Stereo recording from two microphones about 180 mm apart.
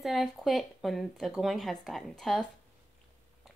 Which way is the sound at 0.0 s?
Centre (ahead or behind).